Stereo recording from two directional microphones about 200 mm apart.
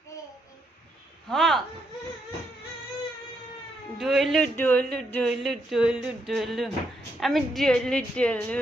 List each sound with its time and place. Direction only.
1.3 s speech: centre (ahead or behind)
3.9 s speech: centre (ahead or behind)